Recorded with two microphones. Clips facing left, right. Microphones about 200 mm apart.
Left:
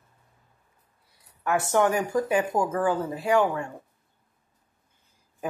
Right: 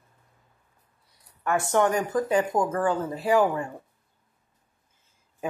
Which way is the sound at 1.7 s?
5° left (ahead or behind).